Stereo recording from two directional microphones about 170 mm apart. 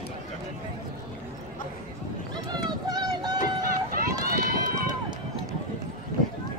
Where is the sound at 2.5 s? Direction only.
25° right (ahead or behind).